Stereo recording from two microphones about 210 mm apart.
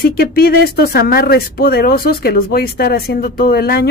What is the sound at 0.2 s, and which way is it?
Speech, 45° left (ahead or behind).